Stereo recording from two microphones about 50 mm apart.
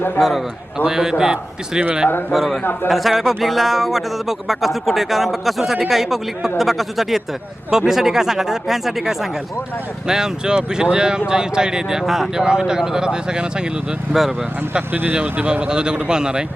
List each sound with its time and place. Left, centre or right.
0.2 s speech: centre
2.3 s speech: centre
15.1 s speech: right